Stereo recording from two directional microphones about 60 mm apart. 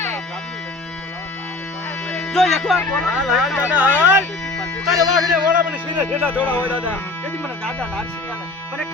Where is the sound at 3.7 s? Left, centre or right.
Right.